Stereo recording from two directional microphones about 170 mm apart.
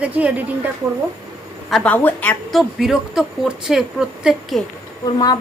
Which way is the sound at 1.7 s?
5° left (ahead or behind).